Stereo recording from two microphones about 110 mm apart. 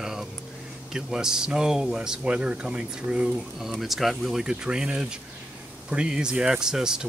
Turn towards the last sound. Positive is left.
turn(degrees=-5)  # may be behind; listen again after turning